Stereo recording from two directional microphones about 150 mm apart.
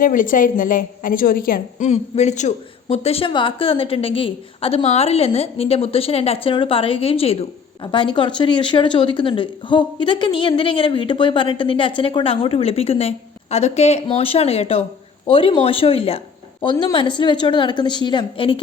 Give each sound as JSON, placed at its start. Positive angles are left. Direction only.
{"t": 0.0, "sound": "a woman's voice", "side_deg": 65}
{"t": 1.9, "sound": "a woman's voice", "side_deg": 50}